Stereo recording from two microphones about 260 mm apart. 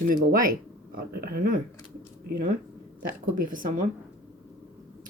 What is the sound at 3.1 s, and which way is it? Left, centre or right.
Speech, right.